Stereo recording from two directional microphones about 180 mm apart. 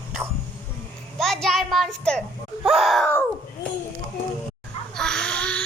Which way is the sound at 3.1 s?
10° left (ahead or behind).